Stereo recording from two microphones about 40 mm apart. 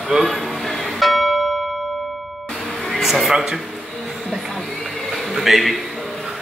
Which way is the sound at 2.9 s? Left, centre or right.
Centre.